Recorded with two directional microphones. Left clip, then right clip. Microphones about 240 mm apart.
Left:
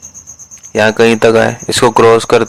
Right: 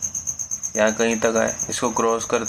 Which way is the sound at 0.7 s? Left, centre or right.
Left.